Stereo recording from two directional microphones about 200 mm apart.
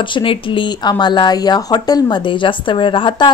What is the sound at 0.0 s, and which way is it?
Speech, 25° left (ahead or behind).